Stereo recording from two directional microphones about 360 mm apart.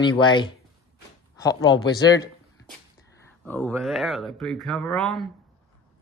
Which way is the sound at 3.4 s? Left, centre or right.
Centre.